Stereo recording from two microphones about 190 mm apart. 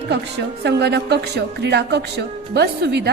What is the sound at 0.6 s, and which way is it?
Speech, 60° right (ahead or behind).